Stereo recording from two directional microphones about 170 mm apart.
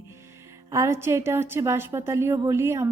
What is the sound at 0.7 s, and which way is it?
A woman's voice, 15° right (ahead or behind).